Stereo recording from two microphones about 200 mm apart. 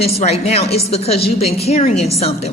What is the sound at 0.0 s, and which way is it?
A woman's voice, 35° left (ahead or behind).